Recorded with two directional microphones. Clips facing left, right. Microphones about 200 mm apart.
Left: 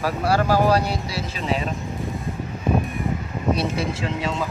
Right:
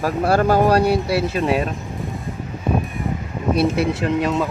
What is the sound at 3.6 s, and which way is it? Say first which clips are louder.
Speech: right 6 dB; 55° right (ahead or behind).